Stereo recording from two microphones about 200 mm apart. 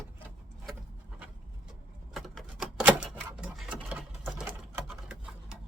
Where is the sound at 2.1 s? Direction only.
Centre (ahead or behind).